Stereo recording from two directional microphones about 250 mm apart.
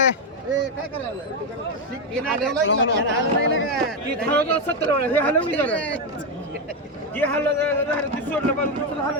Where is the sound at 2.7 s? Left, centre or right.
Left.